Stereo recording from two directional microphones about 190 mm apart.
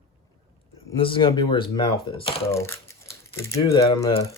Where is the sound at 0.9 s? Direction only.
25° left (ahead or behind).